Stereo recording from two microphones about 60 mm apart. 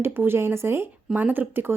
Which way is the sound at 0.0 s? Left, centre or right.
Right.